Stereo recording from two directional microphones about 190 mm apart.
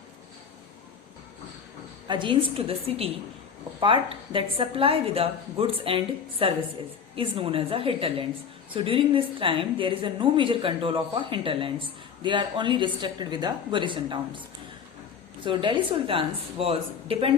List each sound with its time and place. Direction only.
2.0 s a woman's voice: 25° right (ahead or behind)
15.4 s a woman's voice: 25° right (ahead or behind)